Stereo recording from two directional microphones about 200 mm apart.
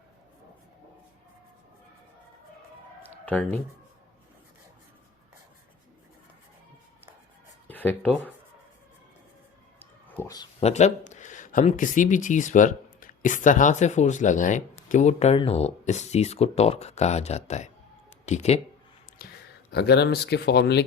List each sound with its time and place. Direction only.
3.0 s a sound: 10° left (ahead or behind)
7.7 s speech: 10° left (ahead or behind)
10.2 s speech: 15° left (ahead or behind)
10.6 s speech: 35° left (ahead or behind)
19.2 s a sound: 45° left (ahead or behind)
19.7 s speech: 55° left (ahead or behind)